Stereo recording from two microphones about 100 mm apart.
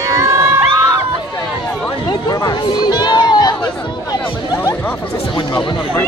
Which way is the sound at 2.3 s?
40° left (ahead or behind).